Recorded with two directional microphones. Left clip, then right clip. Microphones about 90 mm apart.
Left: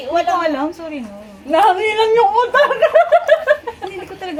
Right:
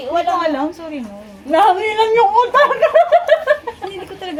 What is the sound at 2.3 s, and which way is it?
Speech, 70° left (ahead or behind).